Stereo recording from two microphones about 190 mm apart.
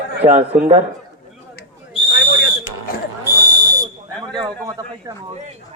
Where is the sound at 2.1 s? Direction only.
60° left (ahead or behind).